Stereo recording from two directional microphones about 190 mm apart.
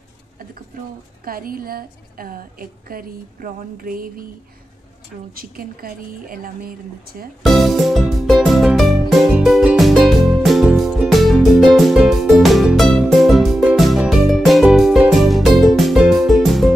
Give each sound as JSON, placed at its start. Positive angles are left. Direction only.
{"t": 1.2, "sound": "a woman's voice", "side_deg": -50}
{"t": 5.3, "sound": "a woman's voice", "side_deg": -50}
{"t": 7.4, "sound": "music", "side_deg": 0}